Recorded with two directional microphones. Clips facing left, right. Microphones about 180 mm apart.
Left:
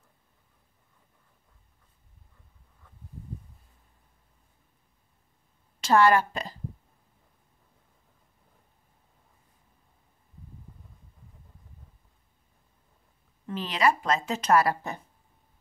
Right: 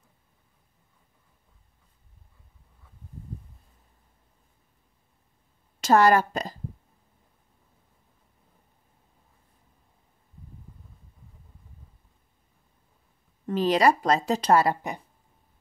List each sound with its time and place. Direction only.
5.8 s a woman's voice: 40° right (ahead or behind)
13.5 s speech: 40° right (ahead or behind); by 15.0 s 20° right (ahead or behind)